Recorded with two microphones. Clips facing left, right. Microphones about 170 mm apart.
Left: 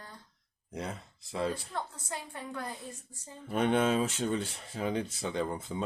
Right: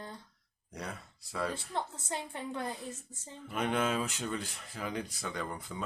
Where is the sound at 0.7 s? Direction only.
20° left (ahead or behind).